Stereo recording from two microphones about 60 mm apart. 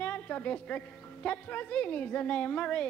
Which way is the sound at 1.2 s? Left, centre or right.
Left.